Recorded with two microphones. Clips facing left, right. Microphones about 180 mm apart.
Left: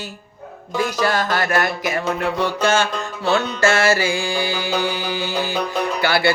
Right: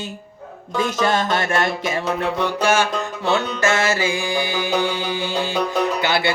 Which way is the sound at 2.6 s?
15° right (ahead or behind).